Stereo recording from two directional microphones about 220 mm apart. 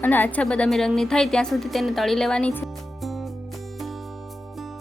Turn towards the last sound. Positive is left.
turn(degrees=0)  # may be behind; listen again after turning